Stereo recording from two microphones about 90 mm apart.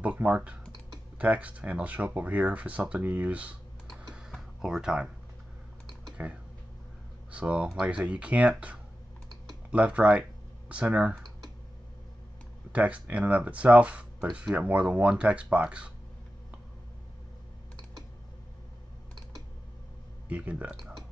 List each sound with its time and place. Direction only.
0.0 s speech: 15° right (ahead or behind)
4.1 s a sound: 5° right (ahead or behind)
6.2 s speech: 15° right (ahead or behind)
12.7 s speech: 15° right (ahead or behind)
20.2 s speech: 15° right (ahead or behind)